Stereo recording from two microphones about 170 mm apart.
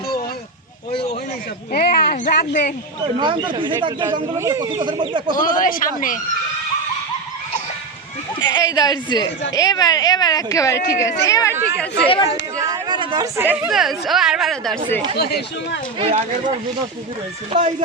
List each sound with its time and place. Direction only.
1.7 s speech: 65° left (ahead or behind)
3.2 s speech: 30° right (ahead or behind)
5.3 s speech: 55° left (ahead or behind)
8.4 s a woman's voice: 25° left (ahead or behind)
12.0 s speech: 30° left (ahead or behind)
12.7 s a sound: 25° right (ahead or behind)
13.3 s a woman's voice: 15° right (ahead or behind)
15.2 s speech: 70° left (ahead or behind)
16.0 s speech: 35° right (ahead or behind)
17.5 s speech: 40° right (ahead or behind)